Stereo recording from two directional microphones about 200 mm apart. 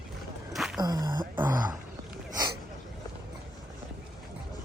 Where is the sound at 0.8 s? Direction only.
20° right (ahead or behind).